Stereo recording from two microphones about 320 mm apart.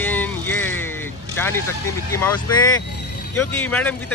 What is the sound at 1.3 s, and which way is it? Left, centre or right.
Vehicle, centre.